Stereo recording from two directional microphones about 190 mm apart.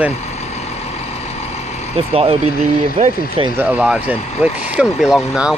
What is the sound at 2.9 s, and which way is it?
Speech, 40° right (ahead or behind).